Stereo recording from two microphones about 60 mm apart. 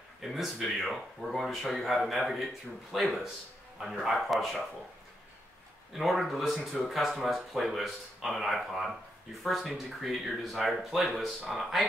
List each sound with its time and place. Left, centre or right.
0.2 s speech: centre
5.9 s speech: centre